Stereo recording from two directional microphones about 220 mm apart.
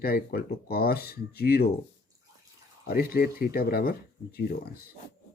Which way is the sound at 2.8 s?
40° left (ahead or behind).